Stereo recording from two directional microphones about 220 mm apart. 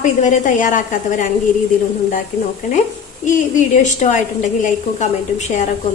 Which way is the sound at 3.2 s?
35° left (ahead or behind).